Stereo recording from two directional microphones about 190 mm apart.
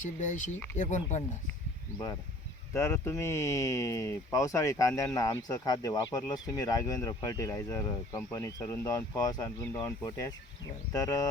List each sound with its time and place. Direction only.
0.0 s speech: 40° left (ahead or behind)
2.7 s speech: 15° left (ahead or behind)